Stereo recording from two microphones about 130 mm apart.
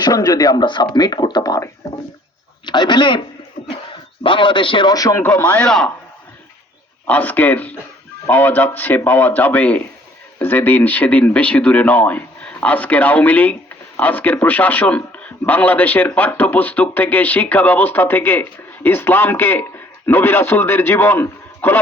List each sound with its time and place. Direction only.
0.0 s speech: 30° left (ahead or behind)
4.2 s speech: 40° left (ahead or behind)
5.2 s speech: 15° left (ahead or behind)
7.1 s speech: 10° left (ahead or behind)